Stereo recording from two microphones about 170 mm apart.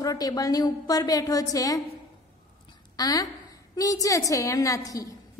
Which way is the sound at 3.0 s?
20° left (ahead or behind).